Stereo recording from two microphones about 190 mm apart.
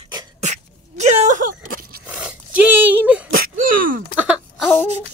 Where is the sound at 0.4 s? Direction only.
35° right (ahead or behind).